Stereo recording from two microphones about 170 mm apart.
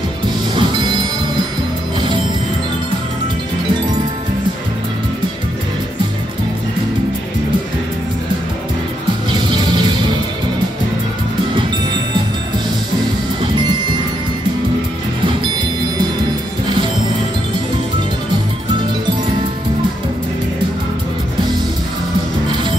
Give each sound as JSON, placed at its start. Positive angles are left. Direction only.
{"t": 0.6, "sound": "music", "side_deg": -25}
{"t": 2.0, "sound": "music", "side_deg": -30}
{"t": 9.5, "sound": "music", "side_deg": -25}